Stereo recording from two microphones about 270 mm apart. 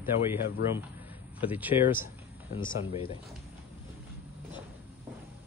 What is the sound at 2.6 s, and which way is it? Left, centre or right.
Speech, centre.